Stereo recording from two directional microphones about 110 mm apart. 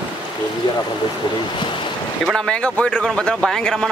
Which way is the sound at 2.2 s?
5° left (ahead or behind).